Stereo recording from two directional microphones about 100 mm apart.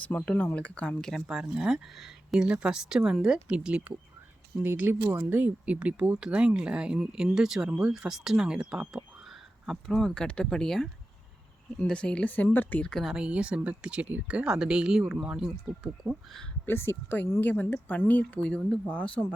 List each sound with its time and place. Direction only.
0.0 s speech: 15° left (ahead or behind); by 9.0 s 5° right (ahead or behind)
9.6 s speech: 5° left (ahead or behind)
12.9 s speech: centre (ahead or behind)
13.2 s speech: 10° right (ahead or behind)
16.6 s speech: 25° left (ahead or behind)